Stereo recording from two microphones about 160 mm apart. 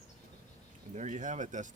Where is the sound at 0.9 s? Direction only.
50° right (ahead or behind).